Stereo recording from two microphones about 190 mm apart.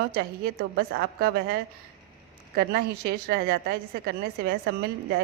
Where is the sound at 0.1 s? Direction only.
55° right (ahead or behind).